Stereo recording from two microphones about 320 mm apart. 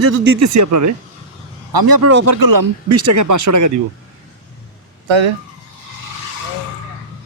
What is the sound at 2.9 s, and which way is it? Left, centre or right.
Speech, right.